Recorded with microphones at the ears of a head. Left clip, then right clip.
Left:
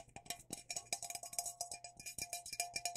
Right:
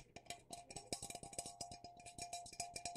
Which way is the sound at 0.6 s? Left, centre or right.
Left.